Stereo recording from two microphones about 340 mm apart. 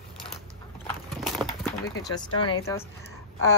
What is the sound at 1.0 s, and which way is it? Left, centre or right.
Clip-clop, centre.